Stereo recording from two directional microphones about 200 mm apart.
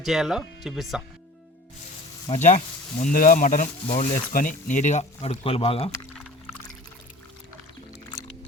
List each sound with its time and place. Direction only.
0.0 s speech: centre (ahead or behind)
2.2 s speech: 35° left (ahead or behind)